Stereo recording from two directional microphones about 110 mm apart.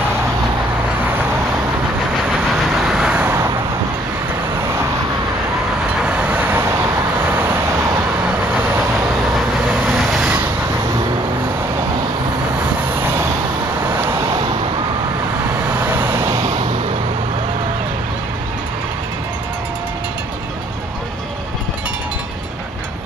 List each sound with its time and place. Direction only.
2.6 s vehicle: 5° right (ahead or behind)
3.3 s vehicle: 25° right (ahead or behind)
6.0 s vehicle: 10° right (ahead or behind)
9.8 s vehicle: centre (ahead or behind)
13.0 s vehicle: 25° right (ahead or behind)
15.8 s vehicle: 15° right (ahead or behind)